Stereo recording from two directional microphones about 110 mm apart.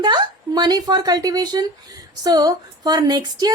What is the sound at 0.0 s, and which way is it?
A woman's voice, 40° right (ahead or behind).